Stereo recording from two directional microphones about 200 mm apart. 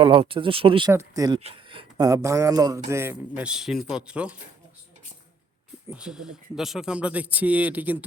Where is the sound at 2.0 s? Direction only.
15° right (ahead or behind).